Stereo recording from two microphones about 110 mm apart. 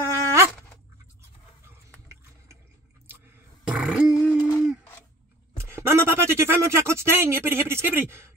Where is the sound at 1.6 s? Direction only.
25° right (ahead or behind).